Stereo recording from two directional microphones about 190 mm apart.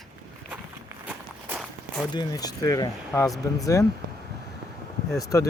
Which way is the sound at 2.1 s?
20° left (ahead or behind).